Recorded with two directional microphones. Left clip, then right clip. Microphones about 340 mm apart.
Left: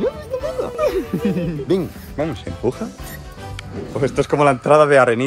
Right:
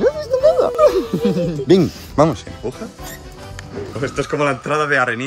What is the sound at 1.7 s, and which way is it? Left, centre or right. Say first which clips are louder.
Speech: right 6 dB; right.